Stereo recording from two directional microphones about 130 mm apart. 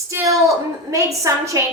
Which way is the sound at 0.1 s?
25° right (ahead or behind).